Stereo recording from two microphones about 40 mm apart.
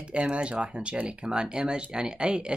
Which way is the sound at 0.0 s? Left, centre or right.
Right.